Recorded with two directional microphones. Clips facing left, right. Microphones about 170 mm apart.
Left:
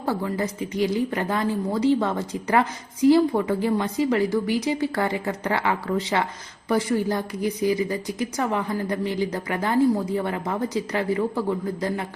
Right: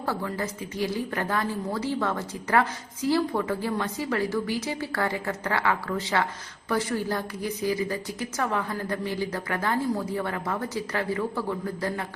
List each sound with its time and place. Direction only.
0.0 s a woman's voice: 15° left (ahead or behind)